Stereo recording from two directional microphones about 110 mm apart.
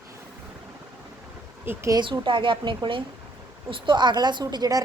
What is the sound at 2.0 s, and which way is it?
A woman's voice, 50° right (ahead or behind).